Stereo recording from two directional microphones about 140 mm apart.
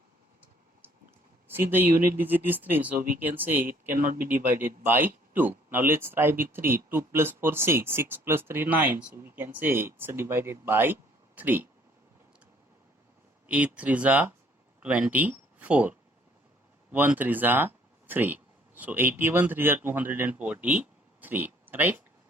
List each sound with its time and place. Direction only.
1.5 s speech: 15° right (ahead or behind)
3.9 s speech: 80° right
4.3 s speech: 15° right (ahead or behind)
13.5 s speech: 10° right (ahead or behind)